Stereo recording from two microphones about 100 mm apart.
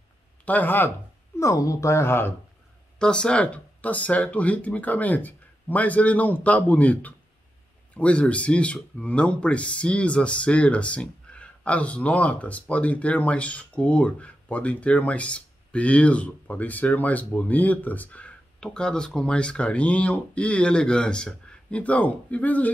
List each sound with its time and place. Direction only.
0.5 s speech: 20° left (ahead or behind)
1.4 s speech: 30° left (ahead or behind)
3.0 s speech: 10° left (ahead or behind)